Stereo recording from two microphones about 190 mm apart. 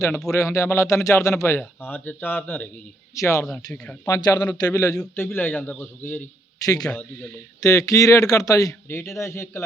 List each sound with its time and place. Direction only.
0.3 s a man's voice: 15° left (ahead or behind)
3.4 s speech: 5° left (ahead or behind)
4.0 s a man's voice: 20° left (ahead or behind)
6.9 s a man's voice: 5° left (ahead or behind)
7.6 s a man's voice: 15° left (ahead or behind)